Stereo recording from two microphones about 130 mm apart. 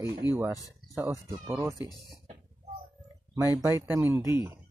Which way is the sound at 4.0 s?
20° right (ahead or behind).